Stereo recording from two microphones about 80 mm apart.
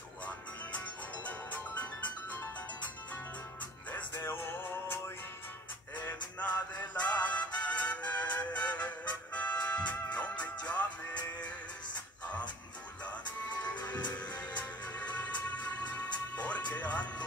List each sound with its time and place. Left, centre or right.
0.7 s music: centre
3.9 s music: left
6.8 s music: centre
13.0 s music: centre